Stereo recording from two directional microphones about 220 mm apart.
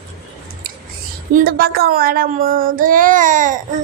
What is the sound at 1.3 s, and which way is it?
Child singing, 40° right (ahead or behind).